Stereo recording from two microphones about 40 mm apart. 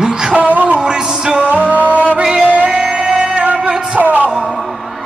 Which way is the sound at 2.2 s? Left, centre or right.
Centre.